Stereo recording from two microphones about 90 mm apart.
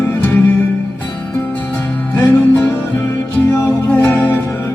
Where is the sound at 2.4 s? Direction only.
20° left (ahead or behind).